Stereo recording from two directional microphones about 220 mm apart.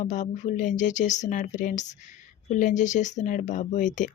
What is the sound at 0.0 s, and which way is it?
Speech, 35° left (ahead or behind).